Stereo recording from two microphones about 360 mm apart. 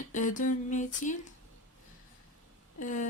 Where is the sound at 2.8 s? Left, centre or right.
Left.